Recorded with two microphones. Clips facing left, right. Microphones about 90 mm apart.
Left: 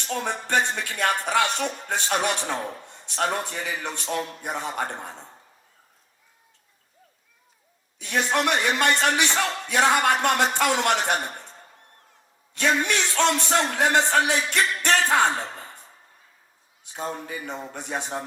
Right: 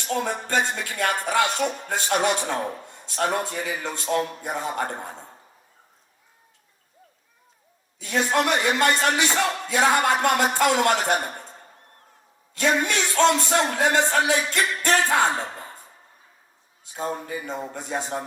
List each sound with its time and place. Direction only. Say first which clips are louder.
0.0 s a woman's voice: right 2 dB; 20° right (ahead or behind)
2.8 s a sound: even; 20° left (ahead or behind)
3.2 s a man's voice: right 3 dB; 20° right (ahead or behind)
8.3 s a man's voice: right 1 dB; 20° right (ahead or behind)
12.5 s a man's voice: right 1 dB; 20° right (ahead or behind)
16.9 s a man's voice: right 2 dB; 20° right (ahead or behind)